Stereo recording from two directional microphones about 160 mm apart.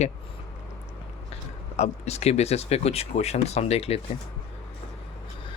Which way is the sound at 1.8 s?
40° left (ahead or behind).